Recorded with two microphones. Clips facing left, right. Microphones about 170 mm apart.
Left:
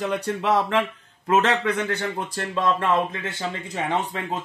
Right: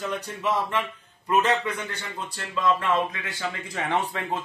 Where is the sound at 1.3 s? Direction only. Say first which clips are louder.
Left 3 dB; 90° left; by 2.5 s 55° left (ahead or behind).